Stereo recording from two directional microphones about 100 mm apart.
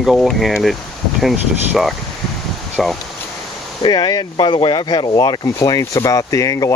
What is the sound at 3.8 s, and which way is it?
Speech, 45° left (ahead or behind).